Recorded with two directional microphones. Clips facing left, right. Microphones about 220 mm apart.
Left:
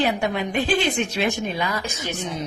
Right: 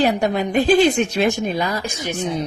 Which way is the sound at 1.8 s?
15° right (ahead or behind).